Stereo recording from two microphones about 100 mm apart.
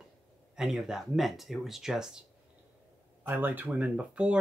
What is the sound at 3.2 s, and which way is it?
Speech, 20° right (ahead or behind).